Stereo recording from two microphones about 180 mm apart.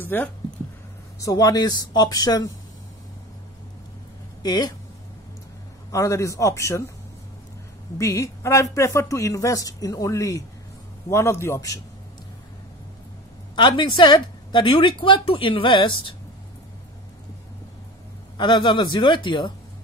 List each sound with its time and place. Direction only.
0.0 s a man's voice: 10° left (ahead or behind)
1.2 s a woman's voice: 20° left (ahead or behind)
4.4 s speech: 25° left (ahead or behind)
5.9 s a man's voice: 15° left (ahead or behind)
8.0 s a man's voice: 15° left (ahead or behind)
13.6 s a woman's voice: 25° left (ahead or behind)
18.4 s a woman's voice: 25° left (ahead or behind)